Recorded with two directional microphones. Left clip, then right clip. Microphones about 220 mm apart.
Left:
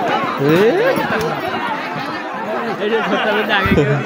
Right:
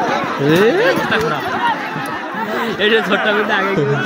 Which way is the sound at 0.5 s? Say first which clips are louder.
Right 1 dB; centre (ahead or behind).